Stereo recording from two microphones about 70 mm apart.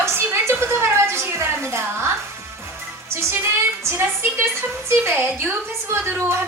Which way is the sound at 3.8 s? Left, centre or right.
Right.